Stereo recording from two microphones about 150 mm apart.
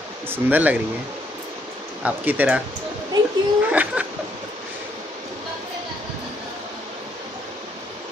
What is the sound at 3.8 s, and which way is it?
Speech, 10° right (ahead or behind).